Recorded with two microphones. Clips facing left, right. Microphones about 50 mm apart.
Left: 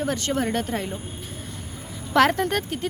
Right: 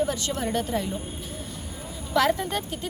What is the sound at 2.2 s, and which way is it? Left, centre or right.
Speech, left.